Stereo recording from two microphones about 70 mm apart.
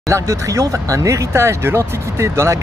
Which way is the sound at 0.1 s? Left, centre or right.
Right.